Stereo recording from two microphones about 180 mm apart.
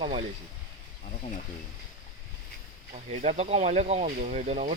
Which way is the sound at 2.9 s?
35° right (ahead or behind).